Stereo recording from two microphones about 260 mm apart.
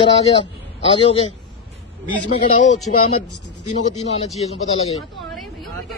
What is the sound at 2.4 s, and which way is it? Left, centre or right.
Speech, left.